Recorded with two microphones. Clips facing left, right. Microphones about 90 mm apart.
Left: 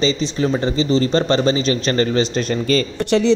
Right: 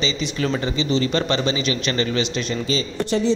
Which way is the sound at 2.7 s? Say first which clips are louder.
Left 6 dB; 70° left (ahead or behind).